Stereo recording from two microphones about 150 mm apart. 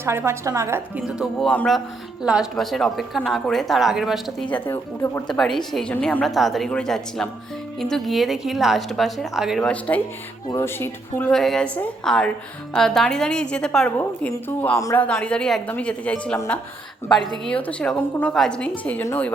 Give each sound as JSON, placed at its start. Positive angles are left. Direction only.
{"t": 0.0, "sound": "a woman's voice", "side_deg": -15}
{"t": 0.9, "sound": "a woman's voice", "side_deg": -5}
{"t": 4.4, "sound": "a woman's voice", "side_deg": 10}
{"t": 5.4, "sound": "a woman's voice", "side_deg": 0}
{"t": 11.3, "sound": "a woman's voice", "side_deg": 5}
{"t": 17.4, "sound": "a woman's voice", "side_deg": 10}